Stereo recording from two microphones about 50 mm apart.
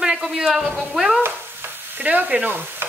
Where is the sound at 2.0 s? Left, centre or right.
Right.